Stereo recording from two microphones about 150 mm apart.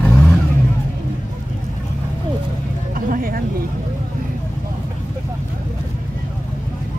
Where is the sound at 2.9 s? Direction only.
70° right (ahead or behind).